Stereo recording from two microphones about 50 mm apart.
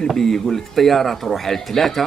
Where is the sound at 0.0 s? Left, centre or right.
Centre.